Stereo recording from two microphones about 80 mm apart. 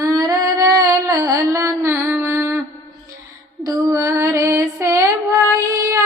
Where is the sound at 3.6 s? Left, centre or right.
Right.